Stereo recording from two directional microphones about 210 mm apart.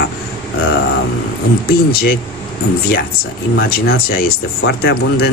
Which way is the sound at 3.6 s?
45° left (ahead or behind).